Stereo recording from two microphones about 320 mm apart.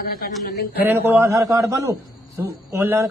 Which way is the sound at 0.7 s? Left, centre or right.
Centre.